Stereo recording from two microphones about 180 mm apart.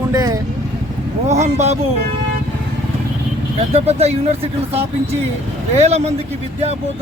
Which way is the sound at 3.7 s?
35° right (ahead or behind).